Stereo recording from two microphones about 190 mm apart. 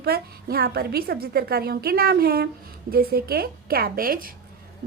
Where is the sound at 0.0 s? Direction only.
55° right (ahead or behind).